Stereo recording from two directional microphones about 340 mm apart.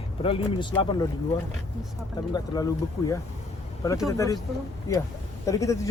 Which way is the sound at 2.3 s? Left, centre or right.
Centre.